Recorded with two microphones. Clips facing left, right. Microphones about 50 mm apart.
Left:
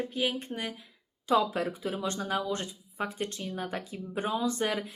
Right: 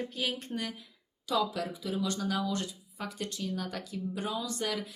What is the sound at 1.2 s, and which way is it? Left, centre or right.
Speech, left.